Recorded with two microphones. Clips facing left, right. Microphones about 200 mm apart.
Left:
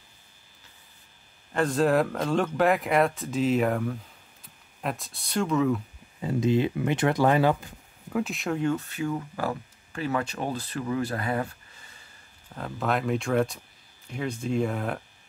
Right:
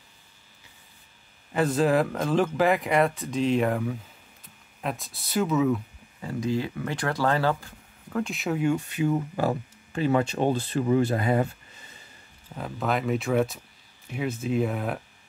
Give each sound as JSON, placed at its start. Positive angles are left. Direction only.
{"t": 1.5, "sound": "speech", "side_deg": -5}
{"t": 6.2, "sound": "speech", "side_deg": 20}
{"t": 8.2, "sound": "speech", "side_deg": 0}
{"t": 12.5, "sound": "speech", "side_deg": 0}